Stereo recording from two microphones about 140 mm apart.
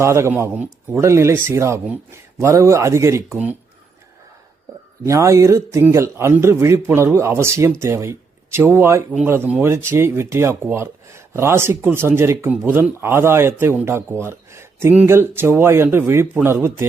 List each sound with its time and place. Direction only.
0.0 s speech: 20° right (ahead or behind)
5.0 s speech: 20° right (ahead or behind)